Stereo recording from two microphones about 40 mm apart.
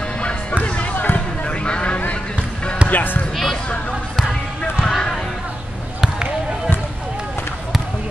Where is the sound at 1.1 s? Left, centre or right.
Left.